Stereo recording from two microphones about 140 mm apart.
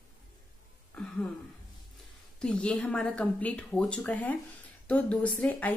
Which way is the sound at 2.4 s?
5° left (ahead or behind).